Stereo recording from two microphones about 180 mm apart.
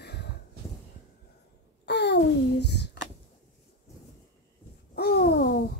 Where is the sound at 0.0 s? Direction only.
65° left (ahead or behind).